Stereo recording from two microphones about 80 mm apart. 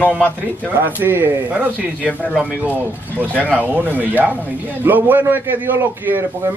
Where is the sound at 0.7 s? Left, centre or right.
Right.